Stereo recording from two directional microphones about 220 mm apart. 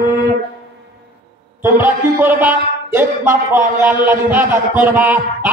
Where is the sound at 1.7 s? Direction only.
10° right (ahead or behind).